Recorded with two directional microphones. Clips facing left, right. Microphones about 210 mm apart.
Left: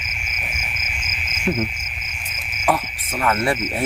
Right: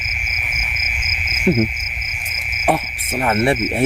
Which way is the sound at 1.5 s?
30° right (ahead or behind).